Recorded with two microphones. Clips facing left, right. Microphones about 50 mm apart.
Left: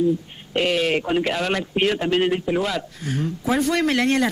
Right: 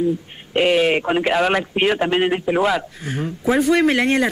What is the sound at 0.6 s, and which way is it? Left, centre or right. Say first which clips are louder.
A man's voice: right 4 dB; centre.